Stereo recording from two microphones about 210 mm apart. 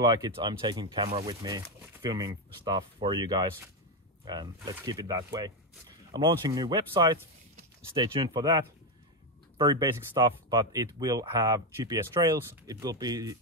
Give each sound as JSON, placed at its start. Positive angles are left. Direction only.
{"t": 0.0, "sound": "speech", "side_deg": -20}